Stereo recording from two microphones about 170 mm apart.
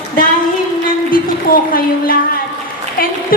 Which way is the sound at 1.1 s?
55° left (ahead or behind).